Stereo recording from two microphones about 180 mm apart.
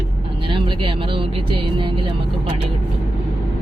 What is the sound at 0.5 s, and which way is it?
Speech, 30° right (ahead or behind).